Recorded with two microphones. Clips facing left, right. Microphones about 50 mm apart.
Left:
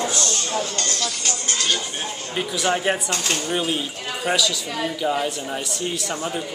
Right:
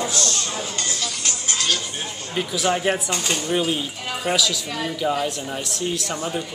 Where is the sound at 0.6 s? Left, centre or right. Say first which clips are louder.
Left 2 dB; centre.